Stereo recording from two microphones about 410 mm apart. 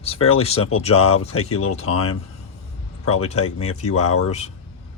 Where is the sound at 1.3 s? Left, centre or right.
Left.